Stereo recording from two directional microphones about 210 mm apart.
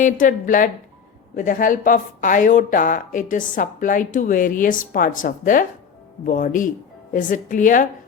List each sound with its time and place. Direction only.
0.0 s speech: 40° left (ahead or behind)